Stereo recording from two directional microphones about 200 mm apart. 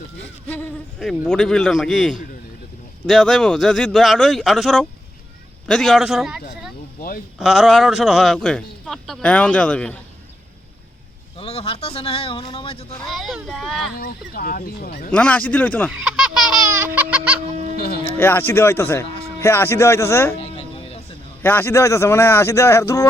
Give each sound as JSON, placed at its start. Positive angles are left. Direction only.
{"t": 0.4, "sound": "speech", "side_deg": 5}
{"t": 11.3, "sound": "speech", "side_deg": 30}
{"t": 13.1, "sound": "speech", "side_deg": 0}
{"t": 13.9, "sound": "speech", "side_deg": 50}
{"t": 15.1, "sound": "speech", "side_deg": 5}
{"t": 16.0, "sound": "a sound", "side_deg": -5}
{"t": 17.7, "sound": "speech", "side_deg": 50}
{"t": 18.2, "sound": "speech", "side_deg": 10}
{"t": 20.3, "sound": "music", "side_deg": 30}
{"t": 21.4, "sound": "speech", "side_deg": 10}